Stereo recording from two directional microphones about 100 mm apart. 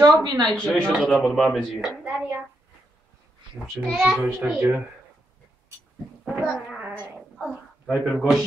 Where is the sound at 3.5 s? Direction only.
5° right (ahead or behind).